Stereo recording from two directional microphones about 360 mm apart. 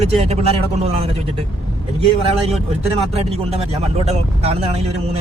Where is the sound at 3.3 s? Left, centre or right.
Centre.